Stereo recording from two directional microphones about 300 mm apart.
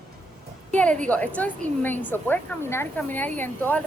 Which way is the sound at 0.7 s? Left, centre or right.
Centre.